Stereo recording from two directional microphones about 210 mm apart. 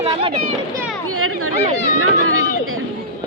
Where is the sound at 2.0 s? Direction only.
85° right.